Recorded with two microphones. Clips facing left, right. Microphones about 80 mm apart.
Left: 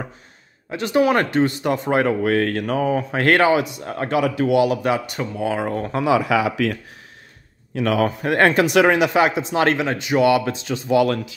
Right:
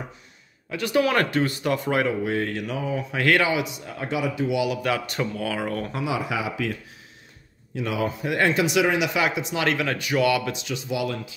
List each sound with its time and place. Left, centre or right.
0.7 s speech: left
2.0 s speech: left
5.1 s speech: centre
5.4 s speech: left
5.9 s speech: left
9.8 s speech: left
11.0 s speech: left